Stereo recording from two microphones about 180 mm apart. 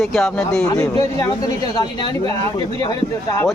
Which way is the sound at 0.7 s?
20° left (ahead or behind).